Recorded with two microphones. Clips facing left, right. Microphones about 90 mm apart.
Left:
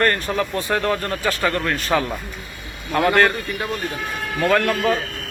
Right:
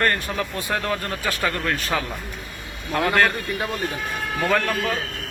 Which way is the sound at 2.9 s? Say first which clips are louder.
Left 4 dB; 15° left (ahead or behind).